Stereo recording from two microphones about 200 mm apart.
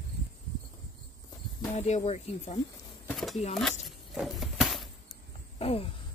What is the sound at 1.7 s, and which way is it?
Speech, 35° left (ahead or behind).